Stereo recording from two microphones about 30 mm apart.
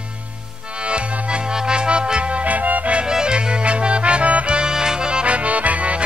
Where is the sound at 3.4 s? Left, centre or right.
Right.